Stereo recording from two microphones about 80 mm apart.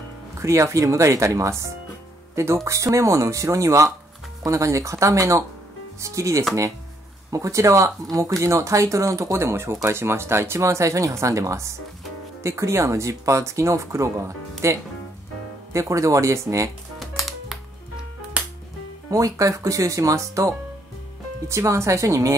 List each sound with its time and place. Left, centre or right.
0.4 s speech: right
17.0 s music: centre
19.0 s speech: right